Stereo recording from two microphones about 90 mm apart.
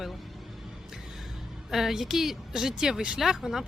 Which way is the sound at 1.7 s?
5° right (ahead or behind).